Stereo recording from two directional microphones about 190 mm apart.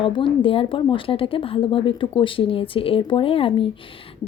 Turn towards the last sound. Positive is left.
turn(degrees=30)  # may be behind; listen again after turning